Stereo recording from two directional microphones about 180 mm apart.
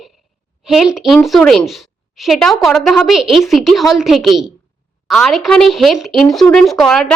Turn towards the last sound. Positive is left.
turn(degrees=0)  # may be behind; listen again after turning